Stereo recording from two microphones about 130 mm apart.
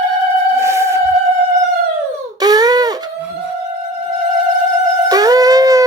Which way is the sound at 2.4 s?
30° right (ahead or behind).